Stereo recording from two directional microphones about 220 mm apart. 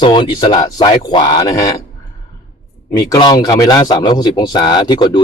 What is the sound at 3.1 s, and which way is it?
Speech, 20° left (ahead or behind).